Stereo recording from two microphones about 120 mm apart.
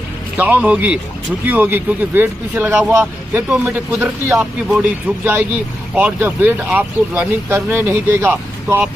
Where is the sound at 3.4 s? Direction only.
Centre (ahead or behind).